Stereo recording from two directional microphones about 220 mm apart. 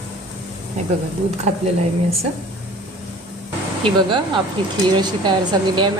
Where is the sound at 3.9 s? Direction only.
25° right (ahead or behind).